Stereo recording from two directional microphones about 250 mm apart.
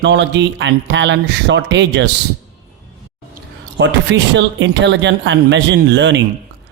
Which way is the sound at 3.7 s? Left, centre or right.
Right.